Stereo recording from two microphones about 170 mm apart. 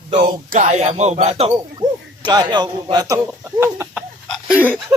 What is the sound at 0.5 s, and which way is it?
Speech, 45° right (ahead or behind).